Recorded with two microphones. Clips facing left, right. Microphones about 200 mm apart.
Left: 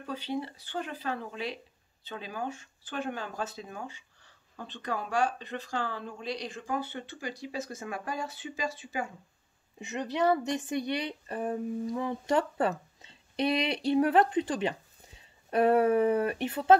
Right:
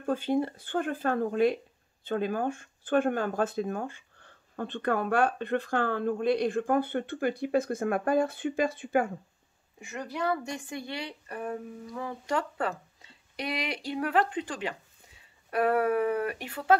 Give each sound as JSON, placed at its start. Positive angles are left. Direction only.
{"t": 0.0, "sound": "speech", "side_deg": -50}
{"t": 9.8, "sound": "a woman's voice", "side_deg": 20}